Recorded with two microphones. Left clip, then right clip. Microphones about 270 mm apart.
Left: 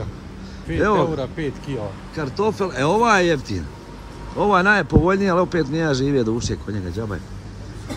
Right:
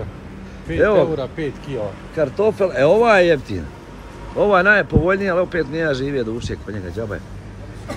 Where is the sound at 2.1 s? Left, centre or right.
Centre.